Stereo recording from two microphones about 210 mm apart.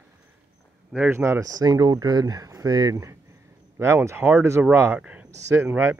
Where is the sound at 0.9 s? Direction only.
10° right (ahead or behind).